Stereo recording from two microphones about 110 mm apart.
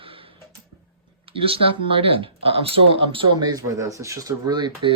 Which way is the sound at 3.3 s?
35° right (ahead or behind).